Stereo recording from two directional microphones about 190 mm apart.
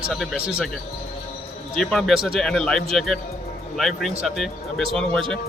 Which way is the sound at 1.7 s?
Centre (ahead or behind).